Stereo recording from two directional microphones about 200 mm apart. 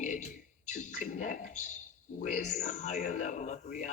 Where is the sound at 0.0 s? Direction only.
40° left (ahead or behind).